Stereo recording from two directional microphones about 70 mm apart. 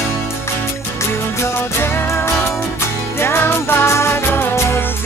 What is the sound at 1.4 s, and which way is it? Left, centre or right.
Music, left.